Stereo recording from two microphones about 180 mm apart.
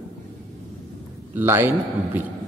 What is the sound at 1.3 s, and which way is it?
Speech, 10° right (ahead or behind).